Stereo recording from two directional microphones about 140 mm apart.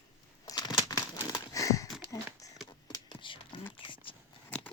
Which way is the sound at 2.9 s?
35° left (ahead or behind).